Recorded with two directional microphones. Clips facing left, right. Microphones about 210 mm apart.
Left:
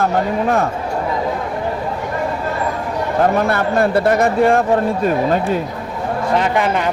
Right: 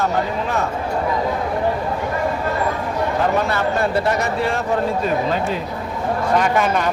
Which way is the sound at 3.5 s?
55° left (ahead or behind).